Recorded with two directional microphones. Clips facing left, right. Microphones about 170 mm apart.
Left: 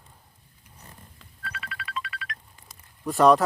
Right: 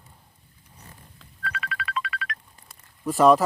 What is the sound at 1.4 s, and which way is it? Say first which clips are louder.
Music: right 6 dB; 90° right.